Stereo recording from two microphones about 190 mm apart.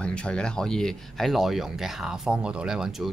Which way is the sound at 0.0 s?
5° left (ahead or behind).